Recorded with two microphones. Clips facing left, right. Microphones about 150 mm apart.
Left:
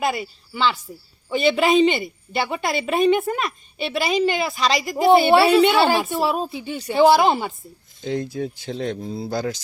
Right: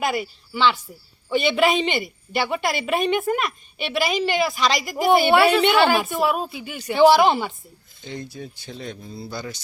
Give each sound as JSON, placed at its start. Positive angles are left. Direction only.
{"t": 0.0, "sound": "a woman's voice", "side_deg": 30}
{"t": 8.0, "sound": "speech", "side_deg": 90}